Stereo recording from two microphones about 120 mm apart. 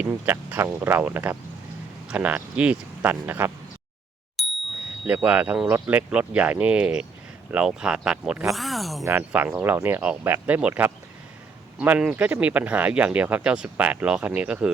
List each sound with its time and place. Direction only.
0.0 s speech: 15° right (ahead or behind)
4.4 s bicycle bell: centre (ahead or behind)
5.0 s speech: 10° right (ahead or behind)
9.0 s speech: 15° right (ahead or behind)